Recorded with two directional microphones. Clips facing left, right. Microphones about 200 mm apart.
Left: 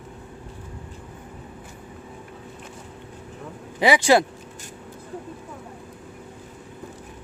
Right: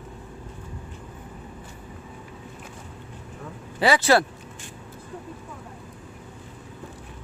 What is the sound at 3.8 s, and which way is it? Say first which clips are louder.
Speech: left 2 dB; 15° left (ahead or behind).